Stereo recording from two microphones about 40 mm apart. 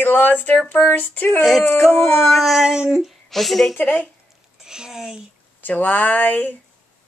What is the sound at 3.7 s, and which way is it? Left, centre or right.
Speech, left.